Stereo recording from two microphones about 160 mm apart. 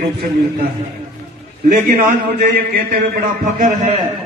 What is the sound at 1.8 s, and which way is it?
A man's voice, 60° right (ahead or behind).